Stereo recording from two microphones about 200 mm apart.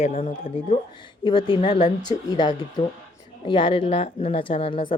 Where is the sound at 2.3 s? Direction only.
20° left (ahead or behind).